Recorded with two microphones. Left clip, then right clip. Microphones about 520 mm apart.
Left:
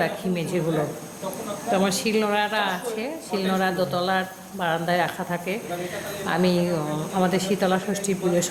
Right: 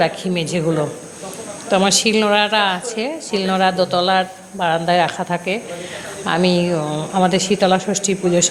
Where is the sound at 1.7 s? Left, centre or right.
Left.